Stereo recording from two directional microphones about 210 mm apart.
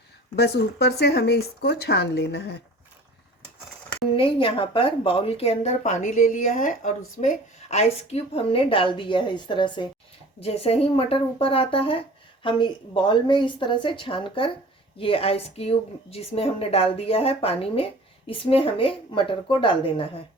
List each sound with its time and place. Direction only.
0.3 s speech: 50° left (ahead or behind)
4.1 s speech: 25° left (ahead or behind)